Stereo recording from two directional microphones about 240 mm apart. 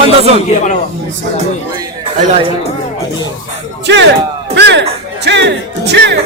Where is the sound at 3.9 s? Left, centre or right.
Right.